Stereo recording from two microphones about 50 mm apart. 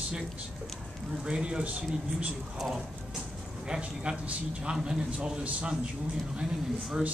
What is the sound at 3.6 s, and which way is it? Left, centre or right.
A man's voice, centre.